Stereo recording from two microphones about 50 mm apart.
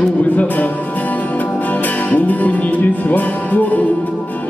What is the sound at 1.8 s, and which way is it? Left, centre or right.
Music, left.